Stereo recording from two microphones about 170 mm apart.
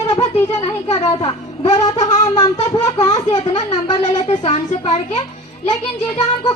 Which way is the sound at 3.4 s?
40° left (ahead or behind).